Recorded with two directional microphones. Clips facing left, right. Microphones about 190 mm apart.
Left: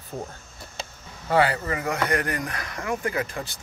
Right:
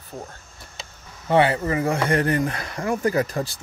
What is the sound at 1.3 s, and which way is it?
Speech, 25° right (ahead or behind).